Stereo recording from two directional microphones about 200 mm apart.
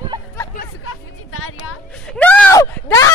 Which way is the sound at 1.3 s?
90° left.